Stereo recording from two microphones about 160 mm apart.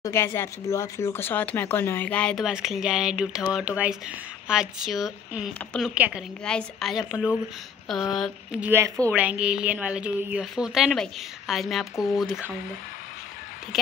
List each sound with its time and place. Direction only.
0.0 s a woman's voice: 15° left (ahead or behind); by 6.2 s 5° right (ahead or behind)
6.4 s a woman's voice: 5° left (ahead or behind); by 9.1 s 20° right (ahead or behind)
9.1 s a woman's voice: 10° right (ahead or behind)